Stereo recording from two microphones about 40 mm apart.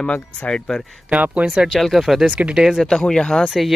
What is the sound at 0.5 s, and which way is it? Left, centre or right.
Speech, left.